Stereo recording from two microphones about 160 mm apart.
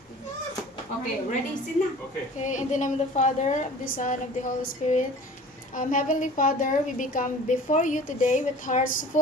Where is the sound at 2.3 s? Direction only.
50° left (ahead or behind).